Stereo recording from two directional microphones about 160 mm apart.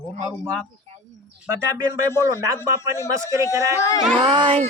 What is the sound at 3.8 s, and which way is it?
Speech, 20° left (ahead or behind).